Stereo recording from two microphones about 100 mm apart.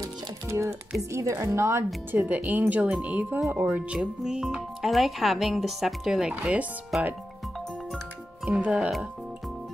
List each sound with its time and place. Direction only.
0.0 s music: 30° right (ahead or behind)
1.1 s a woman's voice: 30° right (ahead or behind)
2.1 s speech: 15° right (ahead or behind)
6.9 s speech: centre (ahead or behind)
8.5 s speech: 15° right (ahead or behind)